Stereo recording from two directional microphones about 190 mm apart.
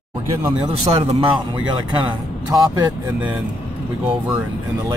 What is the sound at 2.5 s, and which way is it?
Speech, 15° right (ahead or behind).